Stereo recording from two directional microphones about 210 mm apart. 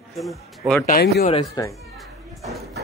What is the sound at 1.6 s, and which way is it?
Speech, 20° left (ahead or behind).